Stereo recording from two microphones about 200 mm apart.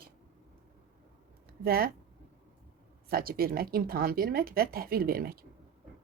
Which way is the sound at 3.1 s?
50° right (ahead or behind).